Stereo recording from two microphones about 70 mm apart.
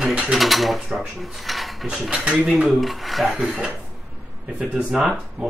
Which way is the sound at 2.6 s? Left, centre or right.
Centre.